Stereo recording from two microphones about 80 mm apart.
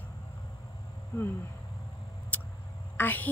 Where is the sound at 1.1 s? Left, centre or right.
Left.